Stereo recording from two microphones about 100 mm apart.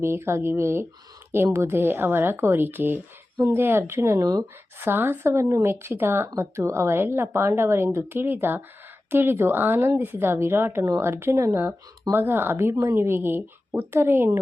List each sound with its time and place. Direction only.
0.0 s speech: 25° right (ahead or behind)
4.8 s speech: 20° right (ahead or behind)